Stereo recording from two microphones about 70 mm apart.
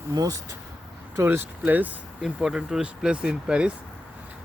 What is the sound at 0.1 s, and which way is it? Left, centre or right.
Speech, right.